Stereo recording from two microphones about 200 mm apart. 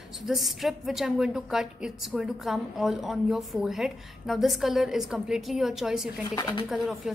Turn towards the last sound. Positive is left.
turn(degrees=0)  # may be behind; listen again after turning